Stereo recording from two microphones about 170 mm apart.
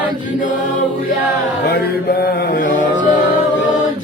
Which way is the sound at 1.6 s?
65° left (ahead or behind).